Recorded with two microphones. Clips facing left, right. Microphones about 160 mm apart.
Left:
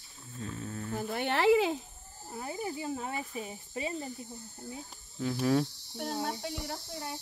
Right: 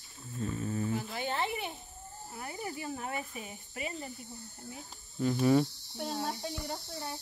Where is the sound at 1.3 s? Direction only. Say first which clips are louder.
Left 12 dB; 90° left.